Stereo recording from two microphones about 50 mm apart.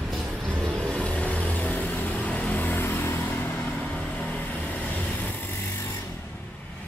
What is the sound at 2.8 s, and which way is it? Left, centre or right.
Vehicle, left.